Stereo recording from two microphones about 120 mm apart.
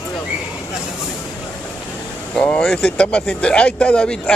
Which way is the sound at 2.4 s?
10° left (ahead or behind).